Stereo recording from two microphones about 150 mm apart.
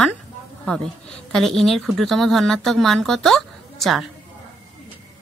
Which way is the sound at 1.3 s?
Centre (ahead or behind).